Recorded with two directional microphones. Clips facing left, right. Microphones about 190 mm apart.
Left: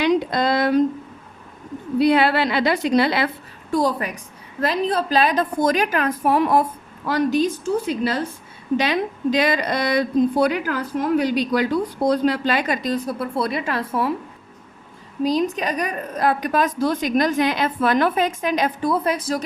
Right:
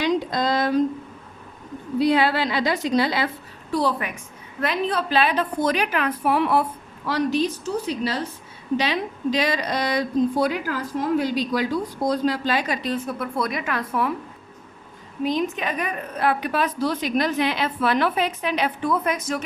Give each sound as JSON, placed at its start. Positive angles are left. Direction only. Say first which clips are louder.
{"t": 0.0, "sound": "a sound", "louder": "left 3 dB", "side_deg": 65}
{"t": 2.0, "sound": "speech", "louder": "left 3 dB", "side_deg": 65}
{"t": 3.7, "sound": "a woman's voice", "louder": "left 3 dB", "side_deg": 45}
{"t": 15.2, "sound": "a woman's voice", "louder": "left 3 dB", "side_deg": 35}